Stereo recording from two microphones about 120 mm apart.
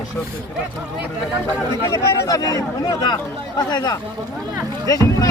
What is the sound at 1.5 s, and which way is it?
Speech, 20° left (ahead or behind).